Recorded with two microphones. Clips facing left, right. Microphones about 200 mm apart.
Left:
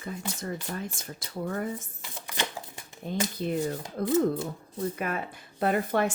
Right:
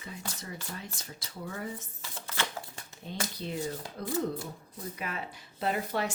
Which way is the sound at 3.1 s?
20° left (ahead or behind).